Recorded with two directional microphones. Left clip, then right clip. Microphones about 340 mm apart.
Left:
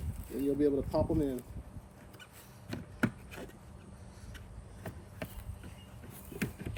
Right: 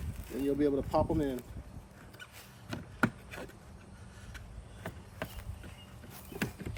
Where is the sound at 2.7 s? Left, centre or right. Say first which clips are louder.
Right 3 dB; centre.